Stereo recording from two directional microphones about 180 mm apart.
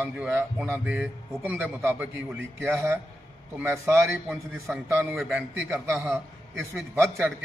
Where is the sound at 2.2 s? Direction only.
90° right.